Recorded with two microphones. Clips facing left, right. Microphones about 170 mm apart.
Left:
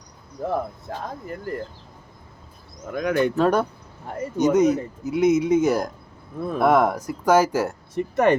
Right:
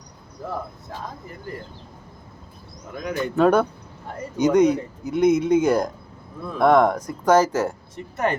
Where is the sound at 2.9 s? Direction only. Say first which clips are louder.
Left 6 dB; 60° left (ahead or behind).